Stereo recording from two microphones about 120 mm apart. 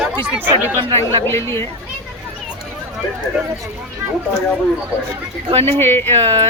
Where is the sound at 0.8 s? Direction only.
50° right (ahead or behind).